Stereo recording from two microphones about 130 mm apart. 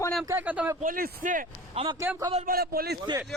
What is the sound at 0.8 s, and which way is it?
Speech, 90° right.